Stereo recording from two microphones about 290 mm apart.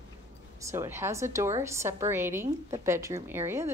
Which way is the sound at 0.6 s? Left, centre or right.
Centre.